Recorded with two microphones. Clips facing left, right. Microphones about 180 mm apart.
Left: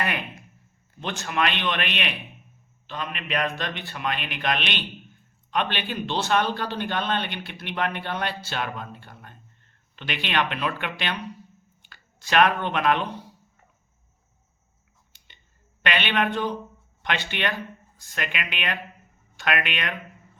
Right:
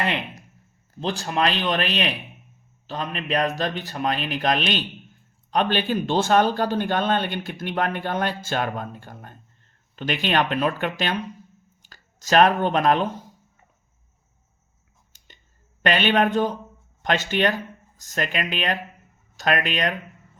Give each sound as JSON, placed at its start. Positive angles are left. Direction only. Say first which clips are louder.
{"t": 1.0, "sound": "a man's voice", "louder": "right 3 dB", "side_deg": -35}
{"t": 15.8, "sound": "a man's voice", "louder": "right 5 dB", "side_deg": -40}